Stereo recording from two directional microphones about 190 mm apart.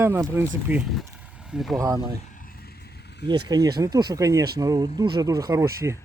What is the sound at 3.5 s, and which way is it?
Speech, 20° right (ahead or behind).